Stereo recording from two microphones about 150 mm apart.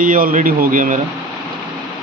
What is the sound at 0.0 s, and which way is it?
Speech, 65° right (ahead or behind).